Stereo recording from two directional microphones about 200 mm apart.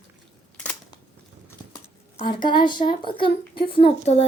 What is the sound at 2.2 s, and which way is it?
Speech, 25° left (ahead or behind).